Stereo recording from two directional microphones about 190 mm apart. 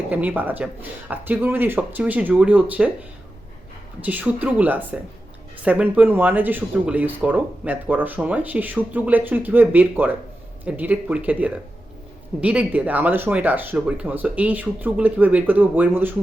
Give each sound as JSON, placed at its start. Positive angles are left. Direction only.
{"t": 0.1, "sound": "speech", "side_deg": -10}
{"t": 4.0, "sound": "speech", "side_deg": -10}